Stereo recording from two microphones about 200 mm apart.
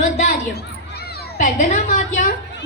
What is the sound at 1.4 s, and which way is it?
Speech, 40° left (ahead or behind).